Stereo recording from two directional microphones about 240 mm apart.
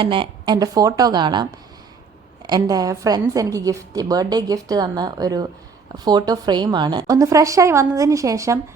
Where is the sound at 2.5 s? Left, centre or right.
Centre.